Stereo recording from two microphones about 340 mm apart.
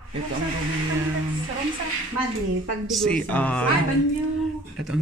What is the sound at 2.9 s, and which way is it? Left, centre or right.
Speech, centre.